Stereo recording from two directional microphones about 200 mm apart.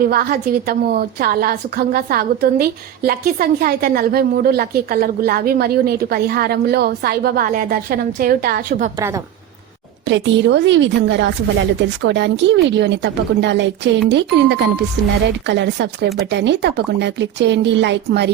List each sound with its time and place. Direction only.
0.0 s a woman's voice: 45° right (ahead or behind)
9.0 s a woman's voice: 15° right (ahead or behind)
10.1 s a woman's voice: 65° right (ahead or behind)